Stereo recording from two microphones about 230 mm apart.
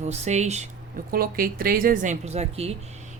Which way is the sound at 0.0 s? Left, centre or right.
Right.